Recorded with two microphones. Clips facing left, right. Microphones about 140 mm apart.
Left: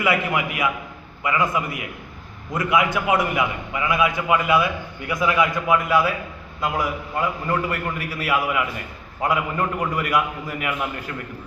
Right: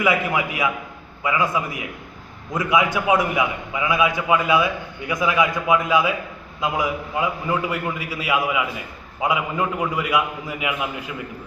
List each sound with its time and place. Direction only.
0.0 s a man's voice: 15° right (ahead or behind)
2.5 s a man's voice: 20° right (ahead or behind)